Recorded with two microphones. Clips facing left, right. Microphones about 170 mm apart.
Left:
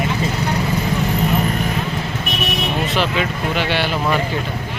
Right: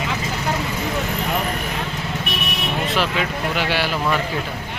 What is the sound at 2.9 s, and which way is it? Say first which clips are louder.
Speech: left 2 dB; centre (ahead or behind).